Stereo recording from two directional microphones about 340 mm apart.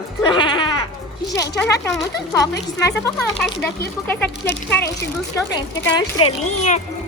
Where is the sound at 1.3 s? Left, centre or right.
Centre.